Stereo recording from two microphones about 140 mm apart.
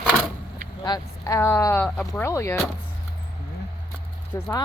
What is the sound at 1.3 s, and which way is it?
Speech, 20° left (ahead or behind).